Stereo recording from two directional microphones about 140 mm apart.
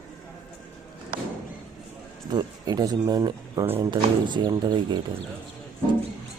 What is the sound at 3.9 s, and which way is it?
A man's voice, 35° right (ahead or behind).